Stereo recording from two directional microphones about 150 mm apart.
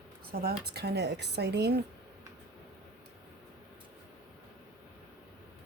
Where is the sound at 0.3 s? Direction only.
90° right.